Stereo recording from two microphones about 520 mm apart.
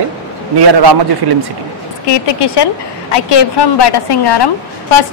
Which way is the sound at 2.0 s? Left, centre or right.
Left.